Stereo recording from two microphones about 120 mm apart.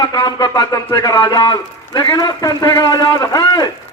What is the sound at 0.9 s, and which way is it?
A man's voice, 30° left (ahead or behind).